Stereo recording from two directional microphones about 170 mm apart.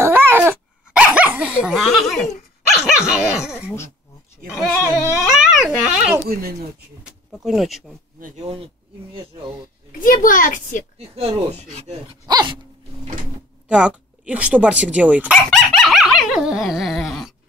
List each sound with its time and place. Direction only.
0.0 s dog: 10° right (ahead or behind)
2.7 s speech: 5° right (ahead or behind)
5.1 s a child's voice: 5° right (ahead or behind)
8.2 s speech: 40° right (ahead or behind)
9.9 s a child's voice: 55° left (ahead or behind)
11.0 s speech: 35° right (ahead or behind)
12.3 s dog: 25° right (ahead or behind)
13.7 s speech: 5° right (ahead or behind)
15.5 s dog: centre (ahead or behind)